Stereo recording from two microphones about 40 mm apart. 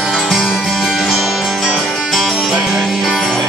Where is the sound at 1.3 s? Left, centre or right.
Centre.